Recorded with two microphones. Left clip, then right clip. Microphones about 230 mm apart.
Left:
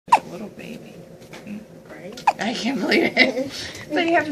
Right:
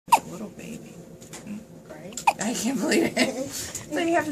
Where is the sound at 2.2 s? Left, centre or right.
Right.